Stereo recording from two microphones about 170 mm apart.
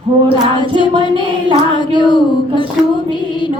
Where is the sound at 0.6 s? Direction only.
30° left (ahead or behind).